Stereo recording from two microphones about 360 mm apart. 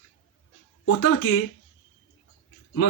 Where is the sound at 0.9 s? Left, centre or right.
Left.